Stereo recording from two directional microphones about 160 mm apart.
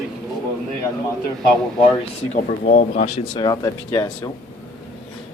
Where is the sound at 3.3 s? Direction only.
25° left (ahead or behind).